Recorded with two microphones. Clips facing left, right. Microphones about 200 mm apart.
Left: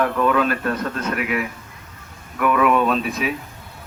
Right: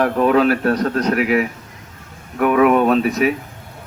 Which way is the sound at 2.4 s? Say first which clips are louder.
Right 4 dB; 50° right (ahead or behind).